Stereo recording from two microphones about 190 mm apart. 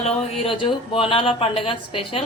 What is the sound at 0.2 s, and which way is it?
A woman's voice, 30° left (ahead or behind).